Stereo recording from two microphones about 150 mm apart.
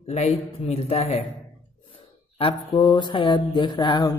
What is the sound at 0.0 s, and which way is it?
A man's voice, 45° left (ahead or behind).